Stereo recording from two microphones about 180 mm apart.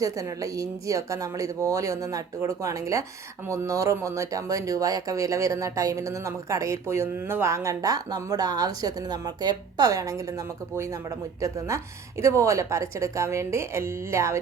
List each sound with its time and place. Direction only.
0.0 s a woman's voice: 20° right (ahead or behind)